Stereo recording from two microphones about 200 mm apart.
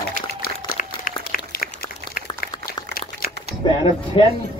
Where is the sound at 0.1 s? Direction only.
45° left (ahead or behind).